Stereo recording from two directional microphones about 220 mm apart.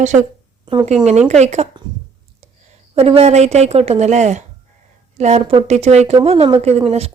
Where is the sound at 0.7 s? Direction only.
20° right (ahead or behind).